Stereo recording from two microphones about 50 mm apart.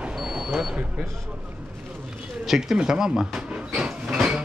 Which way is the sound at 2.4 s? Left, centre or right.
Centre.